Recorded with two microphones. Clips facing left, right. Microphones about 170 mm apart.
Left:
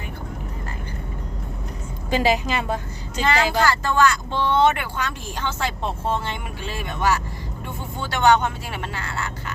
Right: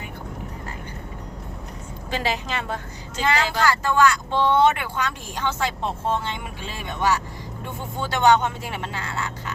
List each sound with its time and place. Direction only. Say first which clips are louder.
2.0 s a woman's voice: left 6 dB; 15° left (ahead or behind)
3.7 s speech: even; 15° right (ahead or behind)
8.1 s speech: even; 20° right (ahead or behind)